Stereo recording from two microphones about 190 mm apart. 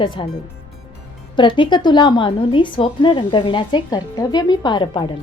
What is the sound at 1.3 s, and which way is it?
A woman's voice, 25° left (ahead or behind).